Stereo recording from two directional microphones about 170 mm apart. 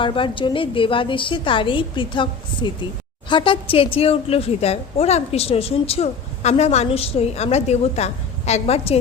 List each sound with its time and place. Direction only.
0.0 s a woman's voice: 30° left (ahead or behind)